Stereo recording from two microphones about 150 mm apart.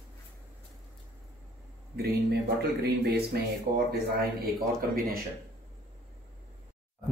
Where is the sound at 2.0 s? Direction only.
90° right.